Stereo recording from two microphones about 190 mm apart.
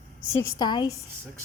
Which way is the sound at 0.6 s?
20° left (ahead or behind).